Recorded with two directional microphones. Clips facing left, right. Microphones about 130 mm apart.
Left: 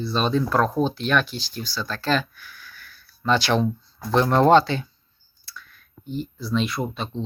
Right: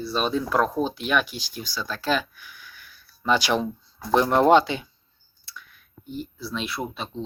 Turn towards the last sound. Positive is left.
turn(degrees=-5)  # may be behind; listen again after turning